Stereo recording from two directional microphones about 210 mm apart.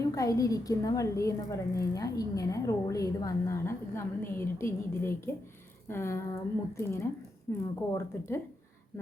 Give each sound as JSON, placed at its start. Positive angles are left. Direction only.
{"t": 0.0, "sound": "a woman's voice", "side_deg": 15}